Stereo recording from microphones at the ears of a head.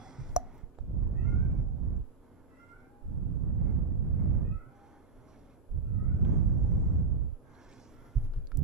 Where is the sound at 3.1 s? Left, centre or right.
Right.